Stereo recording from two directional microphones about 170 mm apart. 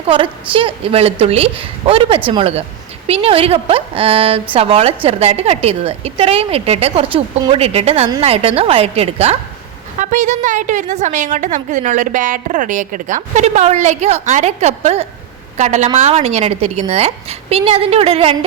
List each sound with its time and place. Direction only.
0.1 s a woman's voice: 30° right (ahead or behind)